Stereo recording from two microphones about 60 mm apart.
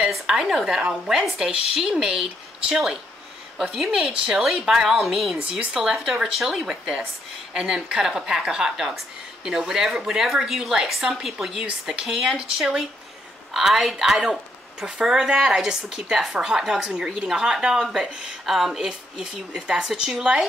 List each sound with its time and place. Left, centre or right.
0.1 s a woman's voice: centre
18.4 s a woman's voice: centre